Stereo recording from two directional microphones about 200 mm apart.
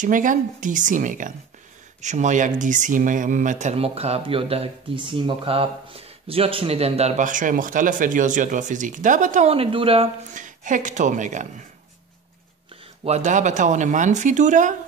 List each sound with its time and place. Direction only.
0.0 s speech: 40° right (ahead or behind)
13.0 s speech: 35° right (ahead or behind)